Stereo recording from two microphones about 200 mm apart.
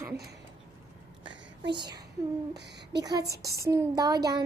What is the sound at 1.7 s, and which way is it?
Female singing, 20° right (ahead or behind).